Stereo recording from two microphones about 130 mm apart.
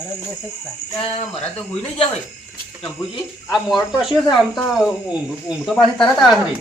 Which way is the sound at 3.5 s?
Centre (ahead or behind).